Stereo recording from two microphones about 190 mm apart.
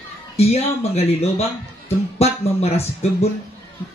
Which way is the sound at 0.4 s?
35° left (ahead or behind).